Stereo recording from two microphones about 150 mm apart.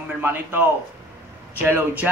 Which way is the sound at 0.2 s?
15° right (ahead or behind).